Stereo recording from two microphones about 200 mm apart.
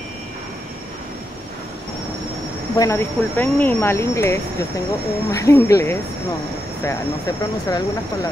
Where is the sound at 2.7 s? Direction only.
15° left (ahead or behind).